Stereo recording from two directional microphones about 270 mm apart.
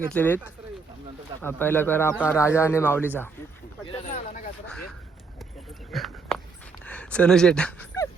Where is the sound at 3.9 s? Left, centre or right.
Left.